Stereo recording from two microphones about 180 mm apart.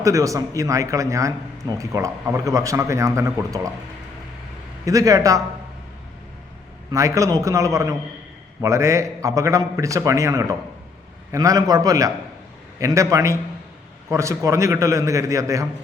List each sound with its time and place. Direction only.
0.0 s speech: 20° right (ahead or behind)
4.9 s a man's voice: 20° right (ahead or behind)
6.9 s a man's voice: 15° right (ahead or behind)